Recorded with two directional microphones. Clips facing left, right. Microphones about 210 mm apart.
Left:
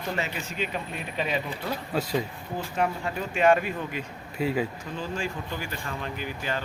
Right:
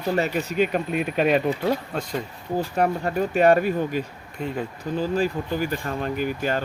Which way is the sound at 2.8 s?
40° right (ahead or behind).